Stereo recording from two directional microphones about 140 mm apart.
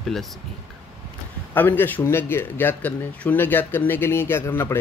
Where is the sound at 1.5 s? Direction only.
15° left (ahead or behind).